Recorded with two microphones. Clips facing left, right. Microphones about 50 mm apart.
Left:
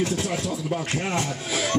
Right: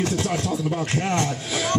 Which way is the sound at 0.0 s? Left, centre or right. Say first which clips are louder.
Right 2 dB; right.